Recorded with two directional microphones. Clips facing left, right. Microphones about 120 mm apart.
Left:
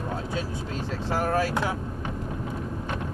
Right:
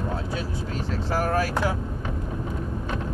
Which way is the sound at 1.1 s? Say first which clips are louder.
Even; 25° left (ahead or behind).